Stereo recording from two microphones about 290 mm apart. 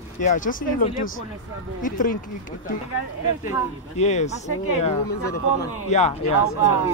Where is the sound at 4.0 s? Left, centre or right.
Left.